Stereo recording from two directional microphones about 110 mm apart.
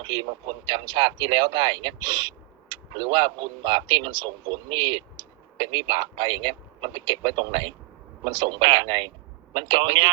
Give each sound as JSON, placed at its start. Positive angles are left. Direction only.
{"t": 0.0, "sound": "a man's voice", "side_deg": -45}